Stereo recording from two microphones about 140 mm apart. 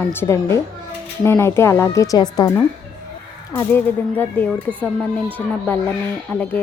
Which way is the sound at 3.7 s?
15° left (ahead or behind).